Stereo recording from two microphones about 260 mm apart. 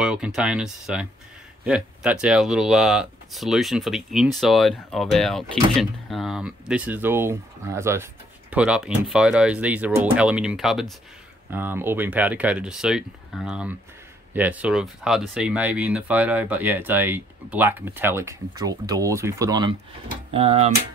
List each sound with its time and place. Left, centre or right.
0.0 s speech: centre; by 20.7 s right